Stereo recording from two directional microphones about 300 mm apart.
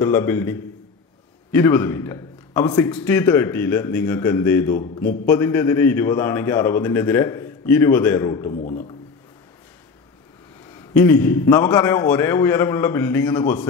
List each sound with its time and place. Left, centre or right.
0.0 s a man's voice: centre
8.5 s speech: left
10.9 s a man's voice: centre